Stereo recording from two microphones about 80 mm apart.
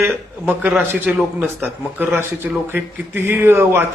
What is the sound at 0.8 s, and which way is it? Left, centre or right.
A man's voice, right.